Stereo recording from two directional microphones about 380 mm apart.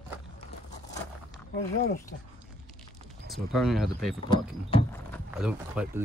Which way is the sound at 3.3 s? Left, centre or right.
Centre.